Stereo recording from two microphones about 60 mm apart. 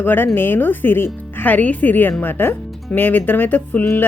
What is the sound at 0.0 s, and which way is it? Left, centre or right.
Speech, left.